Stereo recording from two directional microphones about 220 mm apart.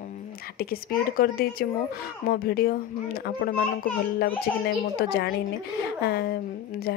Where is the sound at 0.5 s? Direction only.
45° left (ahead or behind).